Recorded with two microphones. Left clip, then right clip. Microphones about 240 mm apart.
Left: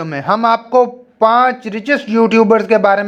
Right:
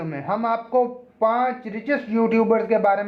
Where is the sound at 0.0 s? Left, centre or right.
Left.